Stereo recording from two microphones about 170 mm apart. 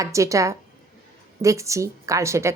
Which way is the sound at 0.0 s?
20° right (ahead or behind).